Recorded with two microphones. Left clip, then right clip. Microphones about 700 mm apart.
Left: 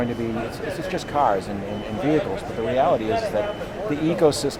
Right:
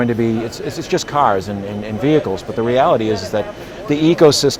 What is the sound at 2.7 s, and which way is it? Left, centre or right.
A man's voice, right.